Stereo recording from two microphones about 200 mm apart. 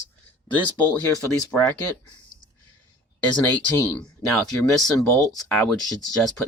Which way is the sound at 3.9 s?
5° left (ahead or behind).